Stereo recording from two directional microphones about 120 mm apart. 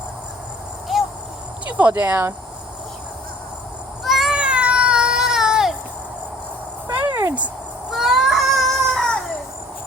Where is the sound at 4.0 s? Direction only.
Centre (ahead or behind).